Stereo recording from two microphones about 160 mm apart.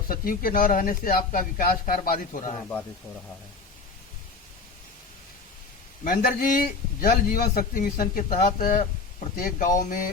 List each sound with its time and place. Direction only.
0.1 s a man's voice: 65° left (ahead or behind)
6.1 s a man's voice: 65° left (ahead or behind)